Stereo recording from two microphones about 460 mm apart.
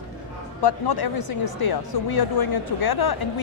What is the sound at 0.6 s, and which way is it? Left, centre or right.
Speech, left.